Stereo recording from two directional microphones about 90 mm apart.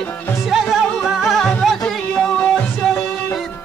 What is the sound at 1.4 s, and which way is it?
Music, 10° left (ahead or behind).